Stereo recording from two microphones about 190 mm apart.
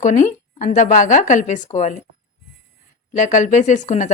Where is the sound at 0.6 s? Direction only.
40° left (ahead or behind).